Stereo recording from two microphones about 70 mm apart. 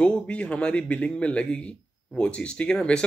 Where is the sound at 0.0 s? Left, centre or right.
Centre.